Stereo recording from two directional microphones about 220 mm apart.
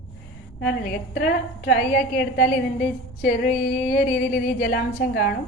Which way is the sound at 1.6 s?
40° left (ahead or behind).